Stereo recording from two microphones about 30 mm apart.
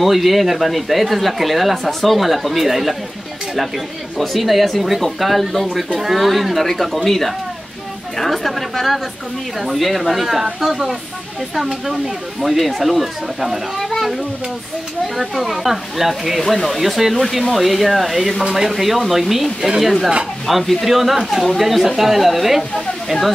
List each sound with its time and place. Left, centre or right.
0.0 s speech: centre
1.9 s speech: centre
2.1 s speech: centre
4.2 s speech: centre
13.7 s a sound: centre
15.1 s speech: centre
16.3 s speech: centre
16.7 s speech: centre